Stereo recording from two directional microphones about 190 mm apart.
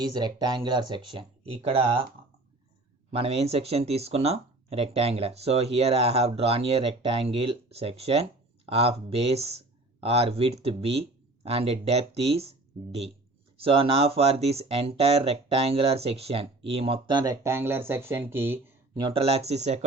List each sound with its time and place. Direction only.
0.0 s speech: 20° right (ahead or behind)
3.1 s speech: 30° right (ahead or behind)
13.6 s speech: 30° right (ahead or behind); by 18.7 s 10° right (ahead or behind)
18.9 s speech: 25° right (ahead or behind)